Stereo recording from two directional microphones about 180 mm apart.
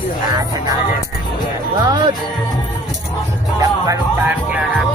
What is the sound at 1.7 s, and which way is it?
Music, 25° right (ahead or behind).